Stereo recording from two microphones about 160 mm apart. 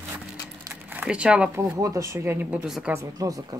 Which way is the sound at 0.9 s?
5° right (ahead or behind).